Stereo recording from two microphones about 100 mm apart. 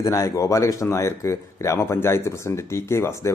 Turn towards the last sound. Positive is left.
turn(degrees=25)  # may be behind; listen again after turning